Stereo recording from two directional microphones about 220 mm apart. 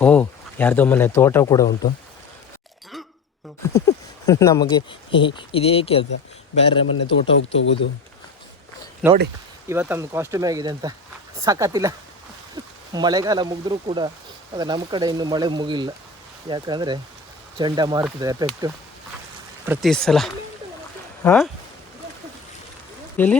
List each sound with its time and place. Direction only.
0.0 s speech: 5° left (ahead or behind)
3.6 s a sound: 15° left (ahead or behind)
4.3 s speech: 15° left (ahead or behind)
7.5 s speech: 55° left (ahead or behind)
9.0 s speech: 5° right (ahead or behind)
19.6 s speech: 10° right (ahead or behind)
19.9 s speech: centre (ahead or behind)
23.1 s speech: 10° left (ahead or behind)